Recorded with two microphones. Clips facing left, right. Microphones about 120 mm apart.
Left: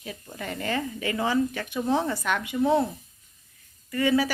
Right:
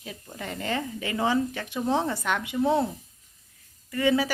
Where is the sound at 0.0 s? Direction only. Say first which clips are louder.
Left 1 dB; 15° right (ahead or behind).